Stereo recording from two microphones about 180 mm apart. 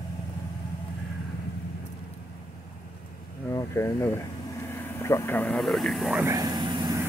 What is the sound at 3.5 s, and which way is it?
Speech, 15° left (ahead or behind).